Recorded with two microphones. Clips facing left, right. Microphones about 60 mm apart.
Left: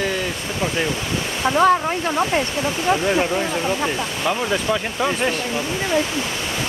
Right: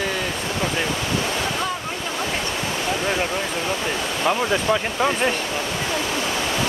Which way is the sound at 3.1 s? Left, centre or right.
Centre.